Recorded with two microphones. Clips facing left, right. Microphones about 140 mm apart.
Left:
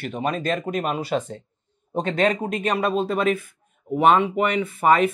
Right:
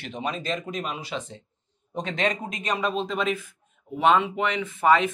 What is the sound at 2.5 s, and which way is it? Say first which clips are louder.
Speech: left 5 dB; 65° left (ahead or behind).